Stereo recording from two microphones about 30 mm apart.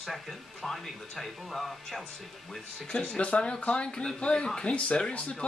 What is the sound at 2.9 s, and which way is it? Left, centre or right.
Speech, left.